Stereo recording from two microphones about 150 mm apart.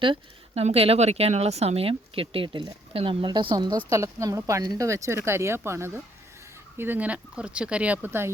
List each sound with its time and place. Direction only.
0.0 s a woman's voice: 35° right (ahead or behind); by 8.3 s 15° right (ahead or behind)